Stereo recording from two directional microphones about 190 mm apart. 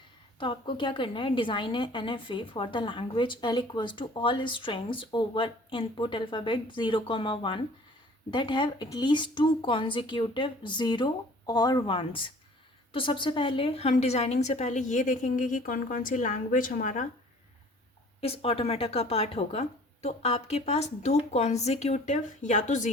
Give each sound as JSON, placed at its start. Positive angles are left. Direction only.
{"t": 0.3, "sound": "a woman's voice", "side_deg": 25}
{"t": 18.2, "sound": "speech", "side_deg": 30}